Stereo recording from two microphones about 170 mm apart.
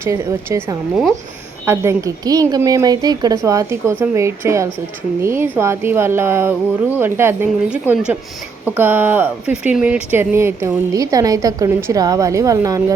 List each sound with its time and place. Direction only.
0.0 s speech: 15° right (ahead or behind)